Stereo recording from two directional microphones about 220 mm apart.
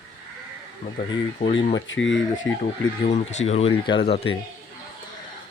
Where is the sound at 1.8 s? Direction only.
60° left (ahead or behind).